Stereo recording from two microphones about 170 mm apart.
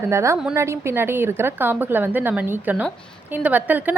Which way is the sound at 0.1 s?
15° right (ahead or behind).